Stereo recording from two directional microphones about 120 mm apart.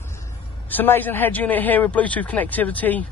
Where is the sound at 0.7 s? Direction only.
15° left (ahead or behind).